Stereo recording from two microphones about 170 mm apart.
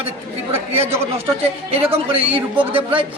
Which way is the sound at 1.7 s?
35° right (ahead or behind).